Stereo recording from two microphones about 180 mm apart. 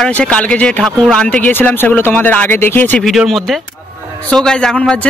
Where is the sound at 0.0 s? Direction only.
5° left (ahead or behind).